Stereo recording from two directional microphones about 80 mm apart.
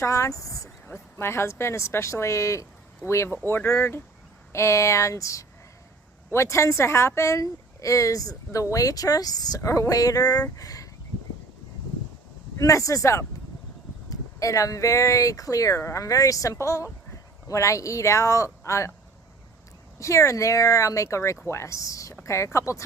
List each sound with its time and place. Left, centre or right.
0.0 s speech: left
0.9 s speech: left
3.2 s speech: left
9.6 s speech: left
12.5 s speech: left
20.0 s speech: left